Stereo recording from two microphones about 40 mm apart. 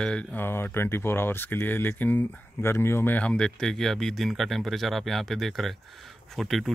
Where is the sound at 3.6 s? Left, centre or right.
Centre.